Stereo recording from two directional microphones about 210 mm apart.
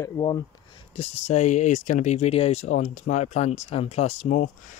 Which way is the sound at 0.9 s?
30° left (ahead or behind).